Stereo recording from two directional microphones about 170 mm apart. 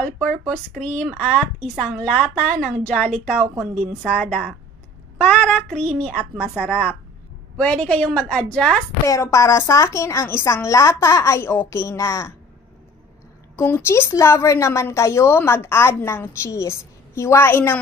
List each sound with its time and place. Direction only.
0.0 s a woman's voice: 5° left (ahead or behind)
9.0 s a woman's voice: 15° left (ahead or behind)
13.6 s a woman's voice: 15° left (ahead or behind)